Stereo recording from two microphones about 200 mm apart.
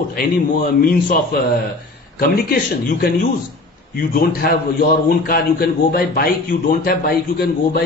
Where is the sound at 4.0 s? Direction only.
45° left (ahead or behind).